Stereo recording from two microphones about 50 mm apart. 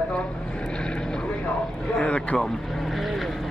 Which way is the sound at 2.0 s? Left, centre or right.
Left.